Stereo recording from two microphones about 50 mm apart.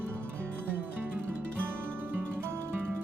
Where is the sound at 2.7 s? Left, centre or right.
Right.